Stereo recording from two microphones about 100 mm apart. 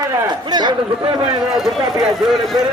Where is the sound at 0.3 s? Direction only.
45° right (ahead or behind).